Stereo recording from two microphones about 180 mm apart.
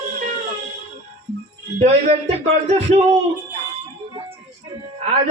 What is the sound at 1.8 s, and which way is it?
Speech, 35° right (ahead or behind).